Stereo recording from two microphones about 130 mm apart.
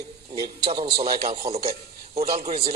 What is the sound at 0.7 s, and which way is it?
A man's voice, 40° right (ahead or behind).